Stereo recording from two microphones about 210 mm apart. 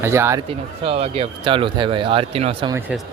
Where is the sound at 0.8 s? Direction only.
30° right (ahead or behind).